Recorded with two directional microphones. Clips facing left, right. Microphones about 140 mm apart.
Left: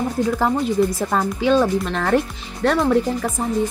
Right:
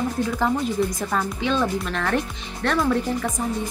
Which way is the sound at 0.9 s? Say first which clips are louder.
Left 4 dB; 30° left (ahead or behind).